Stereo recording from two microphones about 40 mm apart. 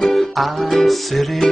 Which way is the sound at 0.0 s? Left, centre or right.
Centre.